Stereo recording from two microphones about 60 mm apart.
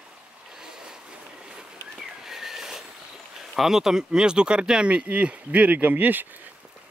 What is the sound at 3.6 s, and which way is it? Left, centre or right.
Speech, centre.